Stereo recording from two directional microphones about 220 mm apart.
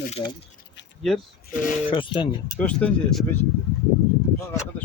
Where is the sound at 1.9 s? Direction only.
20° left (ahead or behind).